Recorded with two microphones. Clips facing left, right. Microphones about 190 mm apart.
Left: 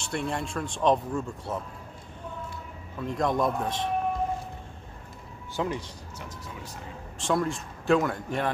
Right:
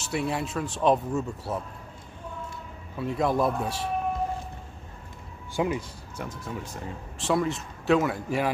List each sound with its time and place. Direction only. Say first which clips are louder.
0.0 s speech: right 2 dB; 5° right (ahead or behind)
3.0 s speech: right 1 dB; 5° right (ahead or behind)
5.6 s speech: right 3 dB; 10° right (ahead or behind)
6.1 s speech: right 7 dB; 50° right (ahead or behind)
7.2 s speech: right 1 dB; 5° right (ahead or behind)